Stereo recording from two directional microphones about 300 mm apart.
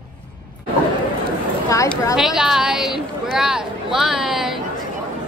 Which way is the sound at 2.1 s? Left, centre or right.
Centre.